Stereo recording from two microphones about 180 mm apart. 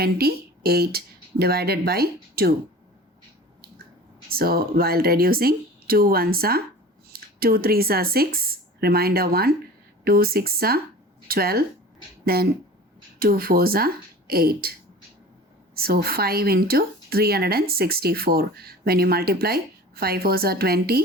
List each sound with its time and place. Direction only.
0.0 s speech: 60° right (ahead or behind)
4.3 s speech: 55° right (ahead or behind)
15.7 s speech: 60° right (ahead or behind)